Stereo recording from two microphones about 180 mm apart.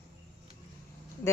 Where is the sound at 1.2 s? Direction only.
15° left (ahead or behind).